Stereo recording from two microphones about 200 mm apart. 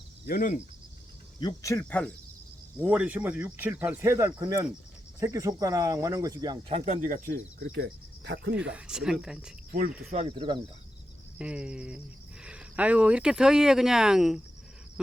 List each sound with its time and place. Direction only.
0.3 s speech: 40° left (ahead or behind)
1.4 s speech: 20° left (ahead or behind)
1.8 s speech: 5° left (ahead or behind)
2.7 s speech: 5° right (ahead or behind); by 7.8 s 45° right (ahead or behind)
7.8 s cricket: 60° right (ahead or behind)
8.5 s speech: 5° right (ahead or behind)
10.1 s speech: 30° right (ahead or behind)
11.3 s speech: 5° right (ahead or behind)